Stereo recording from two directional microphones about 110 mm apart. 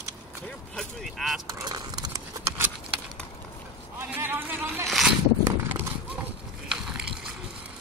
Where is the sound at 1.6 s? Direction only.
40° right (ahead or behind).